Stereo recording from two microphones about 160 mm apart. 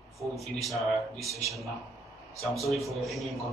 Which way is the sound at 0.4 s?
Centre (ahead or behind).